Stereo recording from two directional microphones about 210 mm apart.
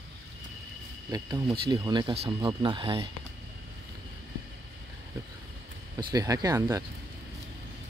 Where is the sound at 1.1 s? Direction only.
20° right (ahead or behind).